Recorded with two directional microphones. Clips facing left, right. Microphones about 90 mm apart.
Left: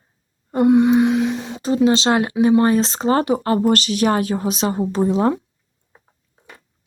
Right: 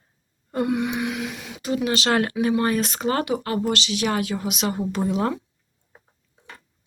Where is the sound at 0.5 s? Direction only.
25° left (ahead or behind).